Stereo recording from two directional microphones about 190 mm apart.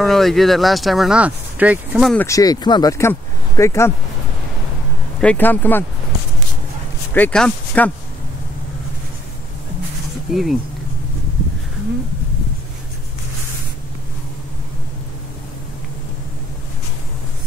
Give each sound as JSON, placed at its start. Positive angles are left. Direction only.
{"t": 0.0, "sound": "speech", "side_deg": 0}
{"t": 2.1, "sound": "speech", "side_deg": 15}
{"t": 5.2, "sound": "speech", "side_deg": 10}
{"t": 7.2, "sound": "speech", "side_deg": 5}
{"t": 10.3, "sound": "speech", "side_deg": 0}